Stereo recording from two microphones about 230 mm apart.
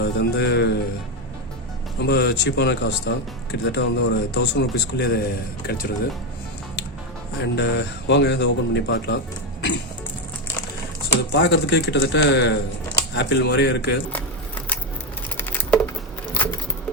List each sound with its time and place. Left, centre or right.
0.0 s a man's voice: left
2.0 s a man's voice: left
7.3 s a man's voice: left
11.3 s a man's voice: left
15.4 s patter: centre